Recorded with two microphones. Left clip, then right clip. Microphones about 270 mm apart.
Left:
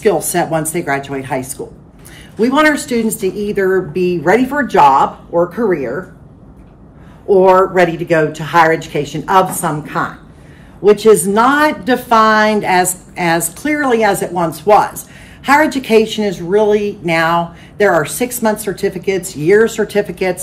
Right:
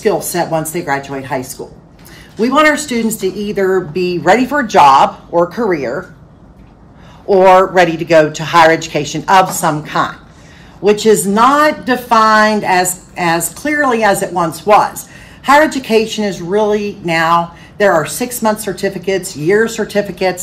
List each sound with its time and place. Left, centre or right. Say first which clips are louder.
0.0 s a woman's voice: left 1 dB; centre; by 5.9 s right
7.2 s a woman's voice: right 2 dB; right